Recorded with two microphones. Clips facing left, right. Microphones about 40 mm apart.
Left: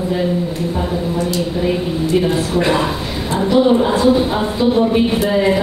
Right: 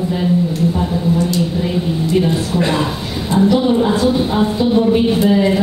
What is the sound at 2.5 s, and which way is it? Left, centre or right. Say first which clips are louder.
A woman's voice: left 1 dB; centre.